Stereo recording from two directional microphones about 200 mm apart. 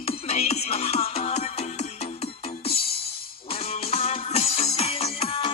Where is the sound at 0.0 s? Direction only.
30° left (ahead or behind).